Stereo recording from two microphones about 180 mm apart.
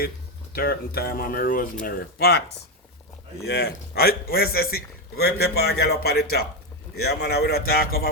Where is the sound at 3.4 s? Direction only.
60° left (ahead or behind).